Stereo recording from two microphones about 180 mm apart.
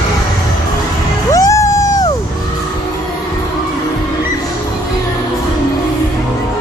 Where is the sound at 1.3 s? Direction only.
15° left (ahead or behind).